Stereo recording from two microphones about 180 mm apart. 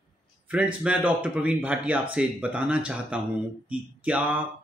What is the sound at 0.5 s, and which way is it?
Speech, 5° right (ahead or behind).